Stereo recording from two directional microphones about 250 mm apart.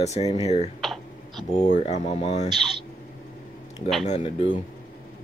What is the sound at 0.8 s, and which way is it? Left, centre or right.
Typing, centre.